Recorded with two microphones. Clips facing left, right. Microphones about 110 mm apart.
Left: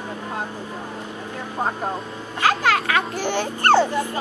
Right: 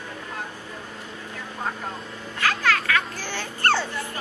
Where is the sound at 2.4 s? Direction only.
30° left (ahead or behind).